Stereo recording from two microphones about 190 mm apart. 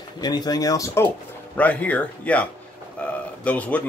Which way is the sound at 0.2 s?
20° left (ahead or behind).